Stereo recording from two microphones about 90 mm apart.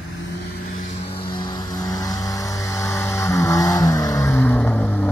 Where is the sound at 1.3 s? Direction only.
50° left (ahead or behind).